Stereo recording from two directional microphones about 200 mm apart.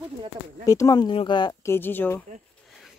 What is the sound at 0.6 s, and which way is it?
Speech, 15° left (ahead or behind).